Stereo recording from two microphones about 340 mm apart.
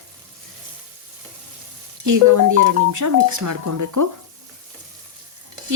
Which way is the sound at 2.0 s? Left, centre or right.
Right.